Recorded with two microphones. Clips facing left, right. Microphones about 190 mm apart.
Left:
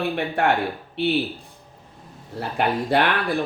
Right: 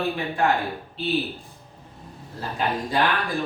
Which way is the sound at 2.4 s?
65° left (ahead or behind).